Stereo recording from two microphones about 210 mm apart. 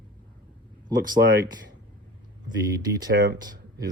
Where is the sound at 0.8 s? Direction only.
20° right (ahead or behind).